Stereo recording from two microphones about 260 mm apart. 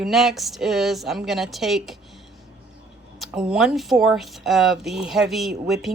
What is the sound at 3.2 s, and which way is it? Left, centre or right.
Speech, centre.